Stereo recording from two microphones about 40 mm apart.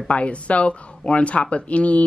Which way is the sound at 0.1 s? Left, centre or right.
Left.